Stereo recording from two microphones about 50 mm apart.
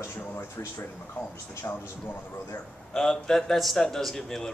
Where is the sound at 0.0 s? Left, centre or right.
Left.